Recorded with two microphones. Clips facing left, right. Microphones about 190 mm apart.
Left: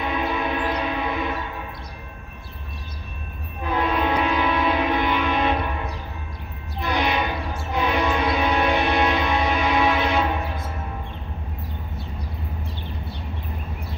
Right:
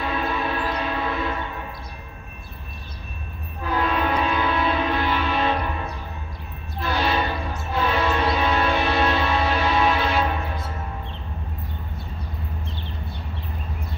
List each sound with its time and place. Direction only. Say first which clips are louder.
0.0 s a sound: left 1 dB; 15° left (ahead or behind)
3.7 s music: left 1 dB; 15° left (ahead or behind)
6.8 s music: even; 15° left (ahead or behind)